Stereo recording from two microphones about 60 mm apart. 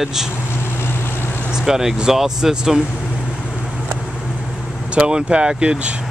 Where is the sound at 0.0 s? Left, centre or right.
Centre.